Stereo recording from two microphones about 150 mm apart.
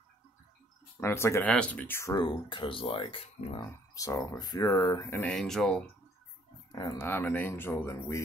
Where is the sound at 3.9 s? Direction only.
20° left (ahead or behind).